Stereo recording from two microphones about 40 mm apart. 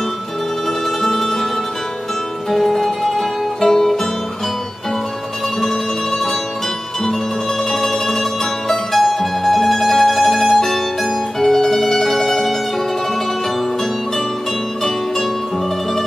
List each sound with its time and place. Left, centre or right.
1.0 s music: centre
2.5 s music: centre
7.7 s mandolin: centre